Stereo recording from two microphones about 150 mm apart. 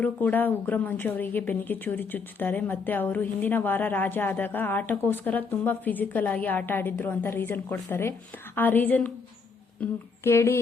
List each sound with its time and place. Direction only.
0.0 s a woman's voice: 10° left (ahead or behind)
10.2 s a woman's voice: 15° left (ahead or behind)